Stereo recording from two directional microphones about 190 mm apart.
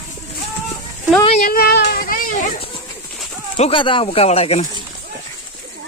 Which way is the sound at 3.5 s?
30° left (ahead or behind).